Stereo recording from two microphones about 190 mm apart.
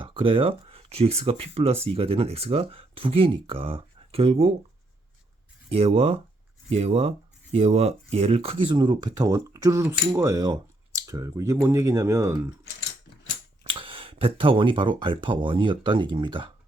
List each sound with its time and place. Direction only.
0.0 s speech: 25° right (ahead or behind)
5.7 s speech: 30° right (ahead or behind); by 12.4 s 15° right (ahead or behind)
13.7 s speech: 25° right (ahead or behind)